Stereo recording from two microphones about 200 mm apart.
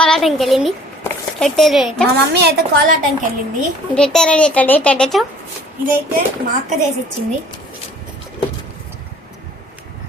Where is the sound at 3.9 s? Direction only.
5° left (ahead or behind).